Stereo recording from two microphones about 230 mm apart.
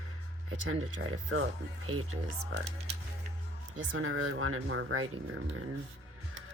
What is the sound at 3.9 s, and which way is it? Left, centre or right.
Speech, right.